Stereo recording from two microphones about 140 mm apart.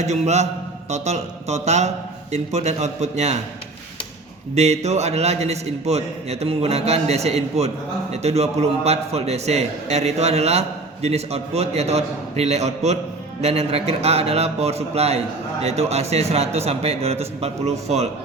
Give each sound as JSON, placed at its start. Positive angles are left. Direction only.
{"t": 0.0, "sound": "a man's voice", "side_deg": -55}
{"t": 4.5, "sound": "a man's voice", "side_deg": -50}